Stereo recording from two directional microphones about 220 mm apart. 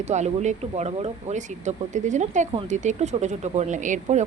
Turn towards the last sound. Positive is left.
turn(degrees=-35)  # may be behind; listen again after turning